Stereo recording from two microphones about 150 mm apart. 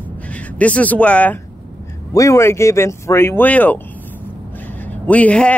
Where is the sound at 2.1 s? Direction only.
20° left (ahead or behind).